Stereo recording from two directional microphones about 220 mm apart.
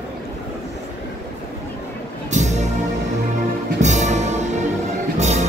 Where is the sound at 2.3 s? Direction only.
30° right (ahead or behind).